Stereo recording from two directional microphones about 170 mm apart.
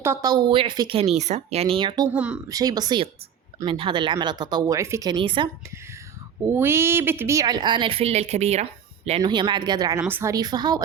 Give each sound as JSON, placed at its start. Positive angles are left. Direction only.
{"t": 0.0, "sound": "speech", "side_deg": -20}
{"t": 2.1, "sound": "speech", "side_deg": -5}
{"t": 2.5, "sound": "speech", "side_deg": -20}
{"t": 5.2, "sound": "speech", "side_deg": -30}
{"t": 6.5, "sound": "speech", "side_deg": -15}
{"t": 9.2, "sound": "speech", "side_deg": -25}
{"t": 10.0, "sound": "speech", "side_deg": -10}